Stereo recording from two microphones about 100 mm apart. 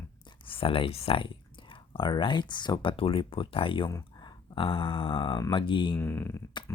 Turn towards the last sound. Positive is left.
turn(degrees=25)  # may be behind; listen again after turning